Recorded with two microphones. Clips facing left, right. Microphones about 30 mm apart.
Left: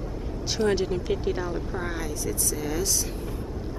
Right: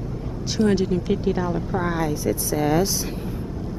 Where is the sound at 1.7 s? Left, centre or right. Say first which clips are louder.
Right 7 dB; centre.